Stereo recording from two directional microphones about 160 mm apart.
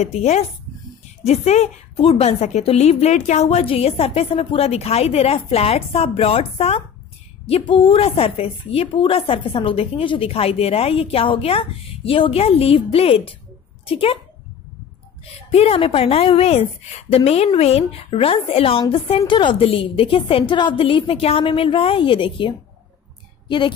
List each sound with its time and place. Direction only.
0.0 s a woman's voice: 45° left (ahead or behind)
15.5 s a woman's voice: 40° left (ahead or behind)